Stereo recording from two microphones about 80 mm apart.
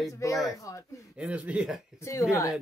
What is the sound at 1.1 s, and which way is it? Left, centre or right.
Speech, centre.